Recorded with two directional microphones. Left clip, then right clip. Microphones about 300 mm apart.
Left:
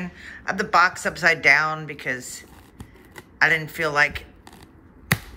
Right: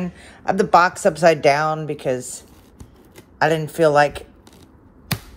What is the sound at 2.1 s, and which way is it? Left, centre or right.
Speech, right.